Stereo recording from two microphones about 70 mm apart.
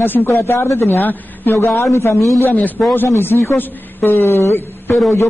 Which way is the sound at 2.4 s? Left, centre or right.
Left.